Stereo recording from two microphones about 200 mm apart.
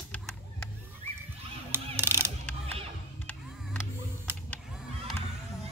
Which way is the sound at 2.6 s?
30° right (ahead or behind).